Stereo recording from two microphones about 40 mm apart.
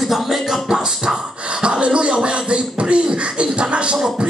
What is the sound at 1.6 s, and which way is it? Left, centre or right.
Beatboxing, right.